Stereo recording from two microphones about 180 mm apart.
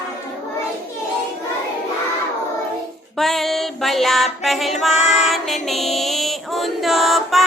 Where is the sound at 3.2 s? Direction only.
Centre (ahead or behind).